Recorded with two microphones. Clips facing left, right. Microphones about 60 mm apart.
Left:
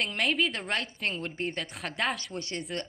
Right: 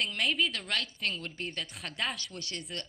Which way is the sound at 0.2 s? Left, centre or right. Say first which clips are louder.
Left 3 dB; centre.